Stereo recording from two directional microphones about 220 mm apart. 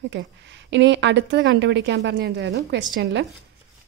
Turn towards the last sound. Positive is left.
turn(degrees=-55)  # may be behind; listen again after turning